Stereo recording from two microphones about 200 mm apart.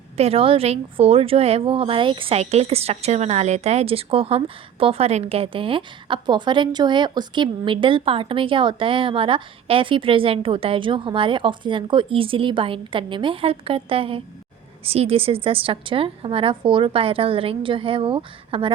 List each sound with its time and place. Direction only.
0.2 s a woman's voice: 30° right (ahead or behind)